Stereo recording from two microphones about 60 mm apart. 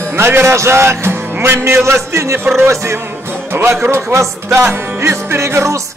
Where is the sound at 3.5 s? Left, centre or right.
Right.